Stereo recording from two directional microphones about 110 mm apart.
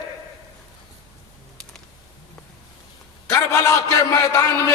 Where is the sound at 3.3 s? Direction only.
25° left (ahead or behind).